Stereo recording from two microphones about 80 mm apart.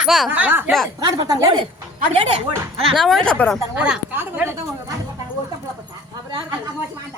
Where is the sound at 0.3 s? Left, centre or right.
Right.